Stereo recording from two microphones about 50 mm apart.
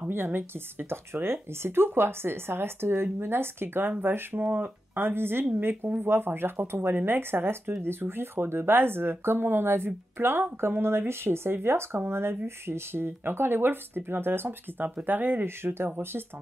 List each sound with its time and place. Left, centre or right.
0.1 s speech: right
15.0 s speech: right